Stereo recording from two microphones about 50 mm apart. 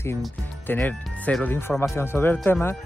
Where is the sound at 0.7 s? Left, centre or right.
Left.